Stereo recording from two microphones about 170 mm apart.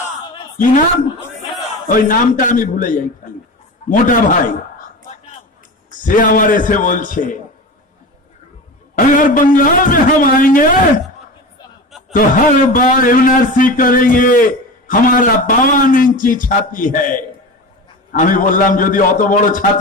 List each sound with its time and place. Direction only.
1.9 s a man's voice: 55° left (ahead or behind)
5.9 s a man's voice: 50° left (ahead or behind)
8.9 s a man's voice: 50° left (ahead or behind)
12.1 s a man's voice: 55° left (ahead or behind)